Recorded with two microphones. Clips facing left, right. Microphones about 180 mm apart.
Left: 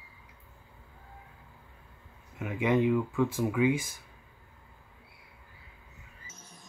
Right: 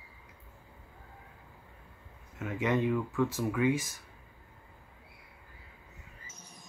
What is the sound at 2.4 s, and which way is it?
Speech, 15° left (ahead or behind).